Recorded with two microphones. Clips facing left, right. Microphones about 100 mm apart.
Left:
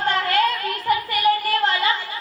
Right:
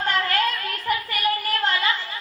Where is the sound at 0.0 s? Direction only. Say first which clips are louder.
Left 3 dB; 30° left (ahead or behind).